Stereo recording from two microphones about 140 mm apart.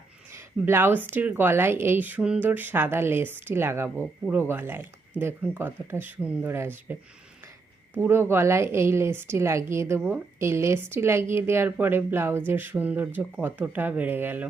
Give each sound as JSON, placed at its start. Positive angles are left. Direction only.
{"t": 0.3, "sound": "a woman's voice", "side_deg": -15}